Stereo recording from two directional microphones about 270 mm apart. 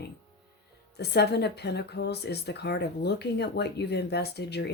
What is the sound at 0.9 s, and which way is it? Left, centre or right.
Speech, left.